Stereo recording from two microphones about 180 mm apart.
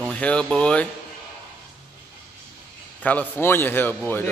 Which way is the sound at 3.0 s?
10° left (ahead or behind).